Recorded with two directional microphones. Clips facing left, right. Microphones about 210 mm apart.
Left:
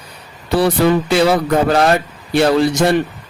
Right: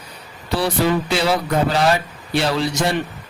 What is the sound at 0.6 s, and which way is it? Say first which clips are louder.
Speech: left 5 dB; 55° left (ahead or behind).